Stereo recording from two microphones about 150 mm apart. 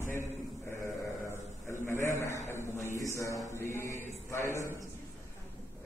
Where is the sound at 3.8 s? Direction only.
60° right (ahead or behind).